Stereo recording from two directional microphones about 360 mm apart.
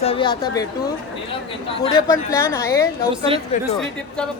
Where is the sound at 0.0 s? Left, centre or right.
Centre.